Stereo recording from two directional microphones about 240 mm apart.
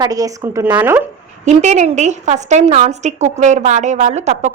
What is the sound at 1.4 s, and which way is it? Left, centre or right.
A woman's voice, right.